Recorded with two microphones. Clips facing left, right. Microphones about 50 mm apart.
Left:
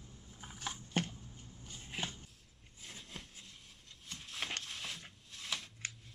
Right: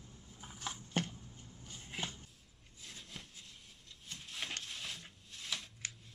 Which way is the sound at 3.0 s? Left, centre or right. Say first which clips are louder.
Even; centre.